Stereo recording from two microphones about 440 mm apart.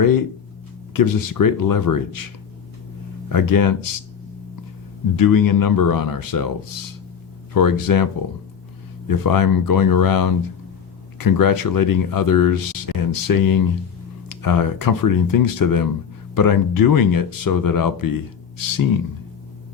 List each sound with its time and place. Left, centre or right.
0.0 s speech: left
3.2 s speech: left
5.1 s speech: left
7.5 s speech: left
9.0 s speech: left